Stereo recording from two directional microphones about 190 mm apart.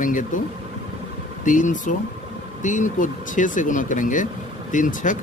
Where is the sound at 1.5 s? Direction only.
40° left (ahead or behind).